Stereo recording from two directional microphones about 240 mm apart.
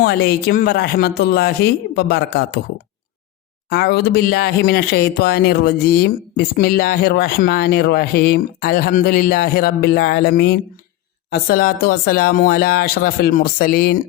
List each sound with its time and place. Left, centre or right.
0.0 s speech: left
3.7 s speech: left